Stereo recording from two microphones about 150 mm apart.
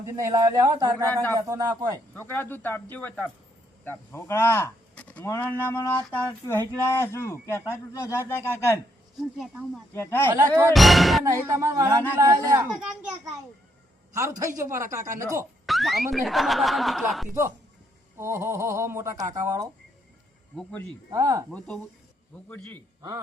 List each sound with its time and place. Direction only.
0.2 s speech: 20° right (ahead or behind)
2.1 s speech: 15° left (ahead or behind)
9.4 s speech: centre (ahead or behind)
9.9 s speech: 15° left (ahead or behind)
10.3 s speech: 20° right (ahead or behind)
10.8 s speech: centre (ahead or behind)
11.2 s speech: 20° right (ahead or behind)
14.1 s speech: 20° right (ahead or behind)
15.6 s speech: centre (ahead or behind)
18.2 s speech: 15° right (ahead or behind)
20.6 s speech: 5° left (ahead or behind)
21.1 s speech: 20° right (ahead or behind)
22.4 s speech: 10° left (ahead or behind)